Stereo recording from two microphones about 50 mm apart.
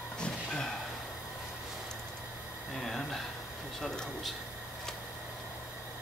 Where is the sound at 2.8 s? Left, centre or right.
Centre.